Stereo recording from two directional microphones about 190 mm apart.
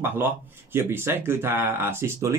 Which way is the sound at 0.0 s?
10° right (ahead or behind).